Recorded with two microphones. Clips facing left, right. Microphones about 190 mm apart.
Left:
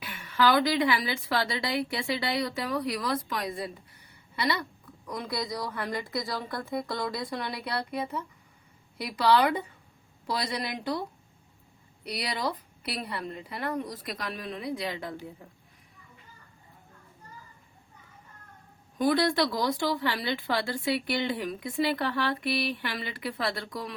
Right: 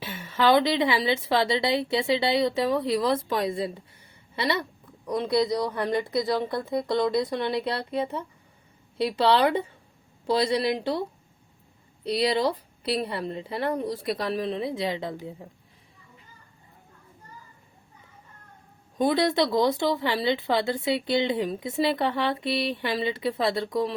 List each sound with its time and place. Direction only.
0.0 s speech: 25° right (ahead or behind)
12.0 s speech: 30° right (ahead or behind)
18.9 s speech: 25° right (ahead or behind)